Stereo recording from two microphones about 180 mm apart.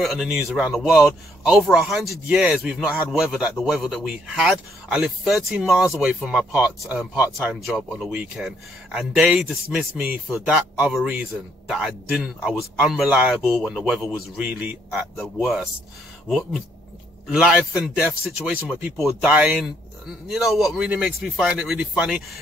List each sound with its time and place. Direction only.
0.0 s speech: centre (ahead or behind)